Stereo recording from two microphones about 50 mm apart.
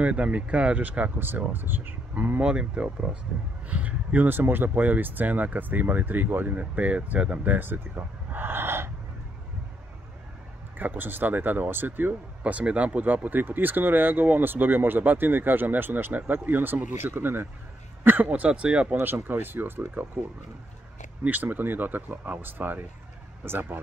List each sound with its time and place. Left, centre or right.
0.0 s speech: right
1.2 s speech: right
2.4 s speech: right
10.8 s speech: right
18.5 s speech: right
18.9 s speech: right
21.2 s speech: right